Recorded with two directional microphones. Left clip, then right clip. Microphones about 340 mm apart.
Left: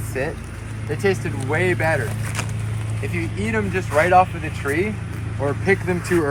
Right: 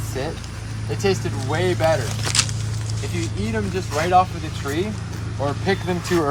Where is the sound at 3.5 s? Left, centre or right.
Centre.